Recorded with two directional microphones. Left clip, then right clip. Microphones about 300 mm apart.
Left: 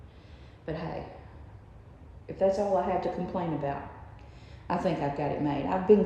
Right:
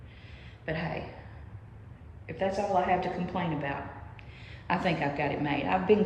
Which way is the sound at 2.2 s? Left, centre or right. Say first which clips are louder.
Left 4 dB; centre.